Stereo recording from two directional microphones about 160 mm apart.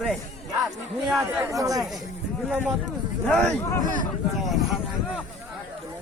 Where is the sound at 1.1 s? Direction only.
20° right (ahead or behind).